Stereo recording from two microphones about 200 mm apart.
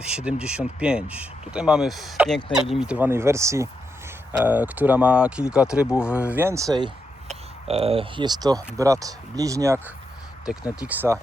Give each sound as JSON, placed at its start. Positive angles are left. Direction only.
{"t": 0.0, "sound": "speech", "side_deg": -5}
{"t": 7.3, "sound": "speech", "side_deg": -30}